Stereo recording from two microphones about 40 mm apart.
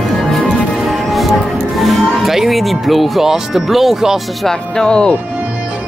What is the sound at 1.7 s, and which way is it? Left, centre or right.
Music, centre.